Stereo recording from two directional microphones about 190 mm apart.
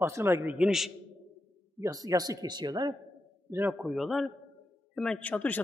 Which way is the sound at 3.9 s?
Centre (ahead or behind).